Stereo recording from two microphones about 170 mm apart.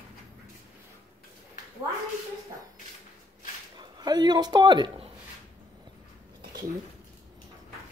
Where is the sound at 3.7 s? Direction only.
25° right (ahead or behind).